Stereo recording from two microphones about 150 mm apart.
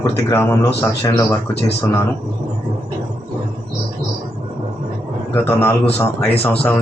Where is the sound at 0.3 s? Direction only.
20° left (ahead or behind).